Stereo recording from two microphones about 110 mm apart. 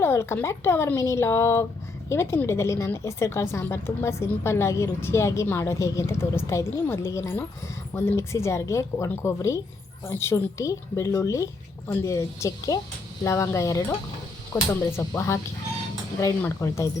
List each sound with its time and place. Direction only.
0.0 s a woman's voice: 25° left (ahead or behind)
16.4 s a woman's voice: 25° left (ahead or behind)